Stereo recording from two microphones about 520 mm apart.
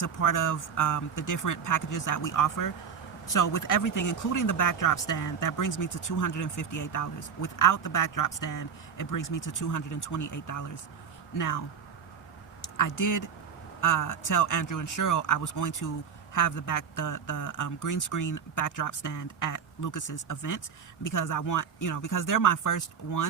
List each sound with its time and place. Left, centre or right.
0.0 s speech: left
12.7 s speech: left